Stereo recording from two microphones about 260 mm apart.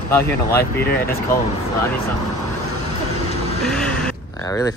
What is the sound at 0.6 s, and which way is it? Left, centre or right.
Speech, left.